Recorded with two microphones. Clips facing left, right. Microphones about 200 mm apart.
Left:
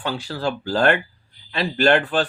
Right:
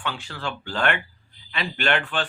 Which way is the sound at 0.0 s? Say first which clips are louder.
Left 7 dB; 40° left (ahead or behind).